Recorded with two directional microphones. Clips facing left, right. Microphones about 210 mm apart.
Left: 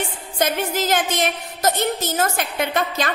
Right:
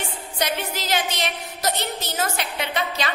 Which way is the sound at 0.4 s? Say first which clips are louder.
Left 6 dB; 50° left (ahead or behind).